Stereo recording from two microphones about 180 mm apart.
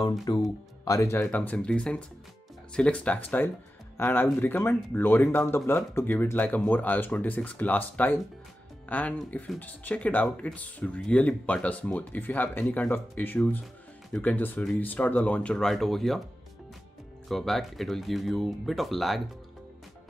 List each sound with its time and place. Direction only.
0.2 s speech: 20° left (ahead or behind); by 16.2 s centre (ahead or behind)
17.3 s speech: centre (ahead or behind)